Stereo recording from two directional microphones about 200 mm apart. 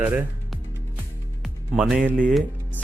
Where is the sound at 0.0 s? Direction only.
10° right (ahead or behind).